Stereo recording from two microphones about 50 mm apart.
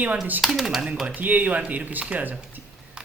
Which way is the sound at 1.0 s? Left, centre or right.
Right.